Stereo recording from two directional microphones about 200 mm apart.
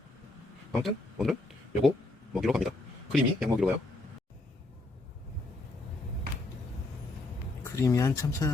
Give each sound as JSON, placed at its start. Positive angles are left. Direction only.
{"t": 0.7, "sound": "speech", "side_deg": 0}
{"t": 7.6, "sound": "speech", "side_deg": 15}